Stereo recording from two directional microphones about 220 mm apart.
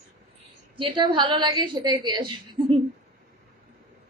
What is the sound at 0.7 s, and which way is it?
A woman's voice, 20° right (ahead or behind).